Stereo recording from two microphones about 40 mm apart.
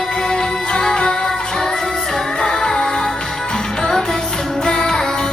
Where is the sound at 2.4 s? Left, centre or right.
Centre.